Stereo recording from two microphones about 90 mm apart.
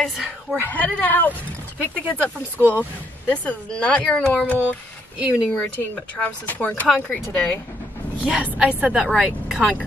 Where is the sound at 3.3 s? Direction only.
15° left (ahead or behind).